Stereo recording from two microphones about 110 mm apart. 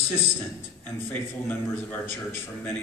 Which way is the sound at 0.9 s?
15° left (ahead or behind).